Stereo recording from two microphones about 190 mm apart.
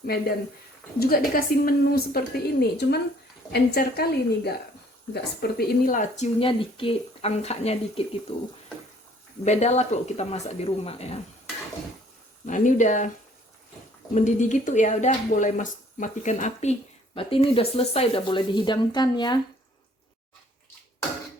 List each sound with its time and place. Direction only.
0.9 s a woman's voice: 50° left (ahead or behind)
6.4 s speech: 30° left (ahead or behind)
9.4 s speech: 35° left (ahead or behind)
12.5 s speech: 40° left (ahead or behind)
14.1 s speech: 40° left (ahead or behind); by 19.4 s 25° left (ahead or behind)